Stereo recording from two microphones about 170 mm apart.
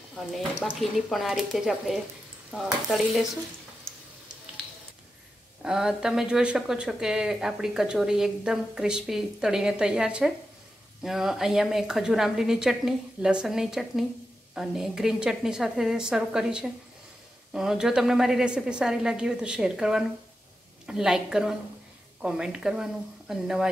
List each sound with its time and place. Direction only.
0.1 s speech: centre (ahead or behind)
5.6 s speech: 5° right (ahead or behind)